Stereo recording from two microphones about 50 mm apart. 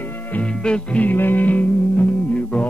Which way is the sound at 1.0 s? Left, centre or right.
Left.